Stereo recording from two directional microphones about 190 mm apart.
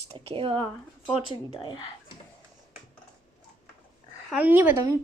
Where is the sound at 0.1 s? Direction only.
30° right (ahead or behind).